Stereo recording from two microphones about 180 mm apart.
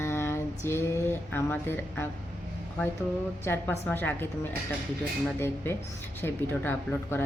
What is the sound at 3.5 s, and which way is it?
Speech, 15° left (ahead or behind).